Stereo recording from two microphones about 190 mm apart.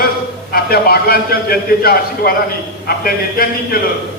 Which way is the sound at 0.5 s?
55° left (ahead or behind).